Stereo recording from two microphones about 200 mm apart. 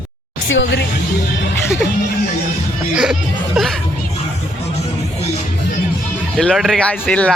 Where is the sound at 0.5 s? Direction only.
65° left (ahead or behind).